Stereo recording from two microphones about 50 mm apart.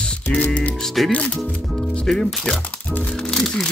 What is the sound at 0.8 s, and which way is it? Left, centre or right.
Speech, centre.